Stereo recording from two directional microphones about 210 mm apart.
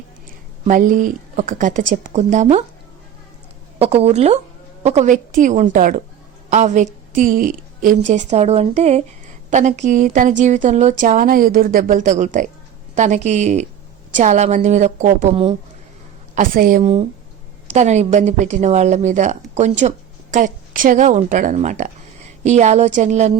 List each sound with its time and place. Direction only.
0.6 s a woman's voice: 40° right (ahead or behind)
3.8 s a woman's voice: 30° right (ahead or behind)
16.3 s a woman's voice: 40° right (ahead or behind)